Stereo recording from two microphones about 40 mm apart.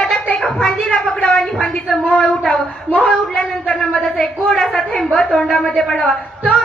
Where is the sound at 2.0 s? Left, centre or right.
Left.